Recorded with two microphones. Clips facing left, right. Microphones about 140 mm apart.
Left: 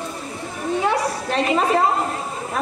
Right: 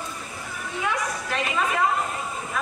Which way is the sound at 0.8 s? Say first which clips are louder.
Left 3 dB; 35° left (ahead or behind).